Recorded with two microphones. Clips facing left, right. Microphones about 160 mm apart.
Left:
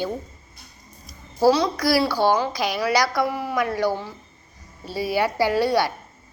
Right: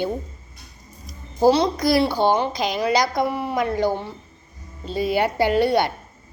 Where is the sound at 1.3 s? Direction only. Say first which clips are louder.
Right 1 dB; 25° right (ahead or behind).